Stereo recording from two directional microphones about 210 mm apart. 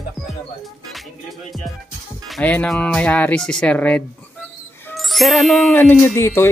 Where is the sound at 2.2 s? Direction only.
5° left (ahead or behind).